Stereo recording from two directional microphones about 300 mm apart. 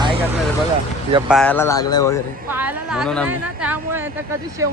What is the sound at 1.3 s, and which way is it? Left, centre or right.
Speech, centre.